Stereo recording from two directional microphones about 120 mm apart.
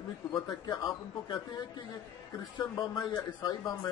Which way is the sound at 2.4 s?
35° left (ahead or behind).